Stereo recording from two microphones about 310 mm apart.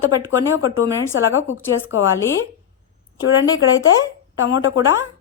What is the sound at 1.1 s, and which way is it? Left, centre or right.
Speech, left.